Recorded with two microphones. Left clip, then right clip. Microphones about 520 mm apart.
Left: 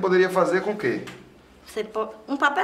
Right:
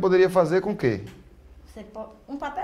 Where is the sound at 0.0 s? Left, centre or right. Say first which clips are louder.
Right 1 dB; right.